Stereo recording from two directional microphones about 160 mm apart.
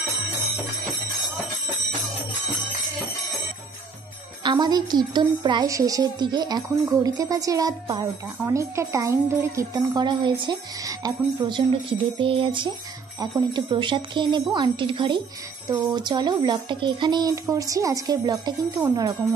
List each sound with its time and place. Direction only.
4.4 s a woman's voice: 30° right (ahead or behind)